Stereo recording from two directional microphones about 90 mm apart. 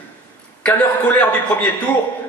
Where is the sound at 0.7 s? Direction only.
15° left (ahead or behind).